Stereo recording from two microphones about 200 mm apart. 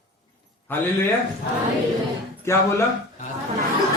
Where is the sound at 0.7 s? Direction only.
10° left (ahead or behind).